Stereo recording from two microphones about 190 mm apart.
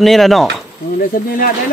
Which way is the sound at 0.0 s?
Centre (ahead or behind).